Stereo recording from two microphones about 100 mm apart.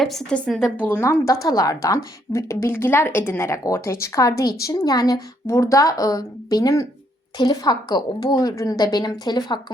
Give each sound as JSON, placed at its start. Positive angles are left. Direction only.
{"t": 0.0, "sound": "speech", "side_deg": 5}
{"t": 0.9, "sound": "a woman's voice", "side_deg": 25}